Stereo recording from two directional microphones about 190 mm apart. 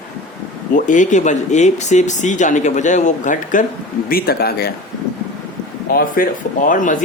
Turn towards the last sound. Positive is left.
turn(degrees=45)  # may be behind; listen again after turning